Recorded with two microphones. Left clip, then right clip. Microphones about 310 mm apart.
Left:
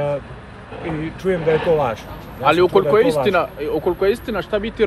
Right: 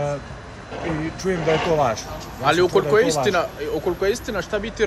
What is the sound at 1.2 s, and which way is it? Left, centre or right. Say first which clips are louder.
Speech: left 4 dB; centre.